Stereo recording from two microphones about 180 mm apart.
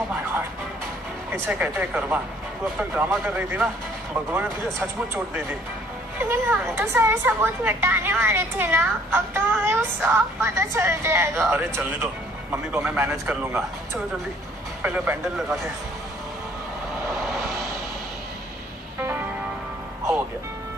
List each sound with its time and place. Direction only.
1.3 s a woman's voice: 10° right (ahead or behind)
14.8 s a woman's voice: 10° right (ahead or behind)
18.9 s music: 10° right (ahead or behind)